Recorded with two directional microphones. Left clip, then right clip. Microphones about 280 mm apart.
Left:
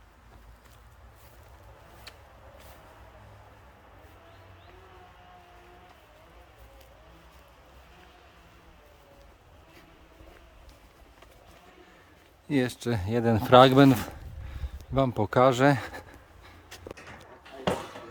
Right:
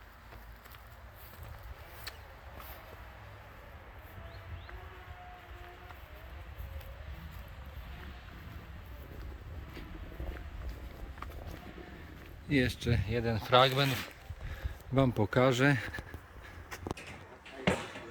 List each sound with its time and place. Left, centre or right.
12.5 s speech: centre
14.9 s speech: centre
17.7 s a sound: left